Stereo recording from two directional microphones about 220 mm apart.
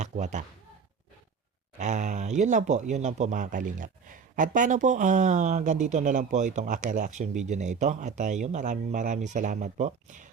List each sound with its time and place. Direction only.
0.0 s speech: 35° right (ahead or behind)
1.8 s speech: 35° right (ahead or behind)